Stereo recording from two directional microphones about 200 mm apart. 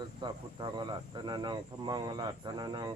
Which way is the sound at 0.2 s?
20° right (ahead or behind).